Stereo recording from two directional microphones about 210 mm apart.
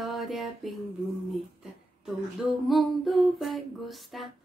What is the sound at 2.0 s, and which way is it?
Humming, centre (ahead or behind).